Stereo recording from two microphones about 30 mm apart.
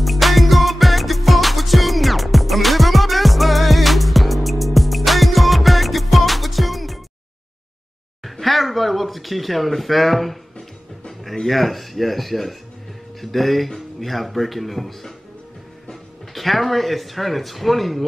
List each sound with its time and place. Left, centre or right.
0.0 s music: centre
8.2 s a sound: centre
11.1 s speech: centre
16.3 s speech: centre